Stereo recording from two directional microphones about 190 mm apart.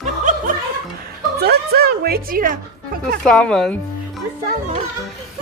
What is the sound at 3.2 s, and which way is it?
Speech, centre (ahead or behind).